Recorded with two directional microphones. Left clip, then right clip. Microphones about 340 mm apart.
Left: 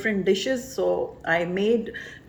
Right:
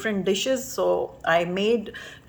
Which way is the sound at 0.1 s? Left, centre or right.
Centre.